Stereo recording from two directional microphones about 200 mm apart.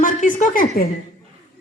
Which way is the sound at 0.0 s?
40° left (ahead or behind).